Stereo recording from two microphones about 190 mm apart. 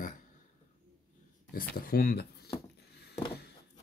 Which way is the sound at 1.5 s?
50° left (ahead or behind).